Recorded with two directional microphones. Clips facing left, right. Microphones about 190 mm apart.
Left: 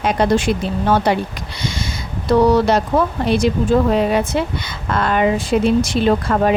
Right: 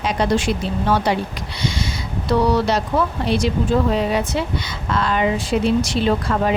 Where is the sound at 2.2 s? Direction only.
50° left (ahead or behind).